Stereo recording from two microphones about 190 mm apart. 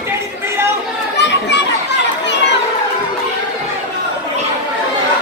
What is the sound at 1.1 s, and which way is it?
Children playing, 65° left (ahead or behind).